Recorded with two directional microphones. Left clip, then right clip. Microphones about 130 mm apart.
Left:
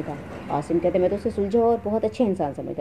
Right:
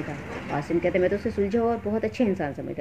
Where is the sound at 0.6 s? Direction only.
25° left (ahead or behind).